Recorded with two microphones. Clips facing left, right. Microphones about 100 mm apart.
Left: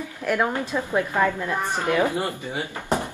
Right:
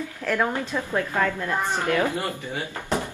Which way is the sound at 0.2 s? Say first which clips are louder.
Left 1 dB; 15° left (ahead or behind).